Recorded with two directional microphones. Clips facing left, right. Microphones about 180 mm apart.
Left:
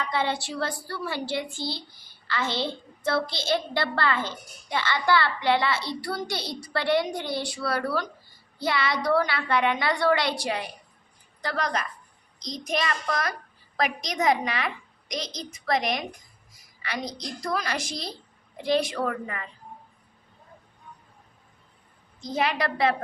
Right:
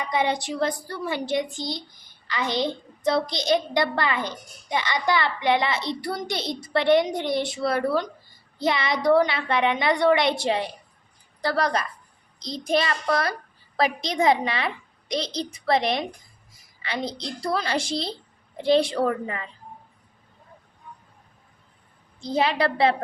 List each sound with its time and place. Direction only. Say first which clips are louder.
0.0 s a woman's voice: right 3 dB; 15° right (ahead or behind)
22.2 s a woman's voice: right 4 dB; 30° right (ahead or behind)